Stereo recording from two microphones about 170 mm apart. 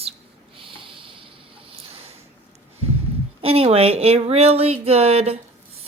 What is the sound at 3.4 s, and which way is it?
Speech, 35° right (ahead or behind).